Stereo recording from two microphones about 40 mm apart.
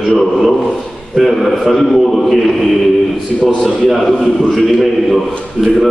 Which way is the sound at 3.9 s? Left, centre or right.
Centre.